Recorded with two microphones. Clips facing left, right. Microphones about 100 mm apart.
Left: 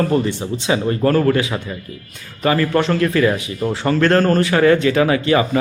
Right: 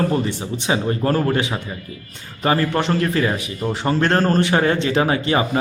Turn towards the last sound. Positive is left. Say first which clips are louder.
# left 3 dB
turn(degrees=-30)  # may be behind; listen again after turning